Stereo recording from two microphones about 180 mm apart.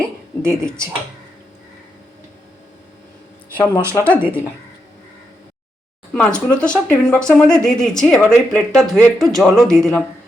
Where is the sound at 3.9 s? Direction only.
5° left (ahead or behind).